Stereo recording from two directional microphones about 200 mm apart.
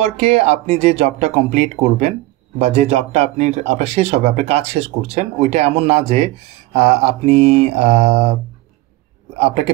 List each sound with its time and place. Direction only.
0.0 s a man's voice: 30° right (ahead or behind)